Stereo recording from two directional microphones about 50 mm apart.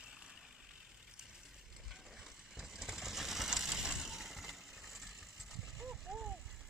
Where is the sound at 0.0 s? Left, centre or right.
Centre.